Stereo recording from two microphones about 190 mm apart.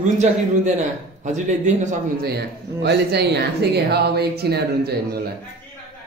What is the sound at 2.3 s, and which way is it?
Speech, 60° right (ahead or behind).